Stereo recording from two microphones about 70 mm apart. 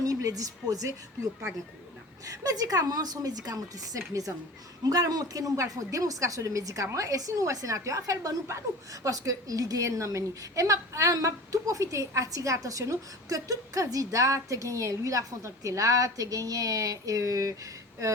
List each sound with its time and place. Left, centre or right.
0.0 s a woman's voice: right
4.9 s a woman's voice: right